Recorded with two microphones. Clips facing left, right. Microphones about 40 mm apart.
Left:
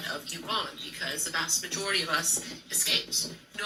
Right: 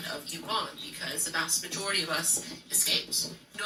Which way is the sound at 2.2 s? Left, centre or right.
Left.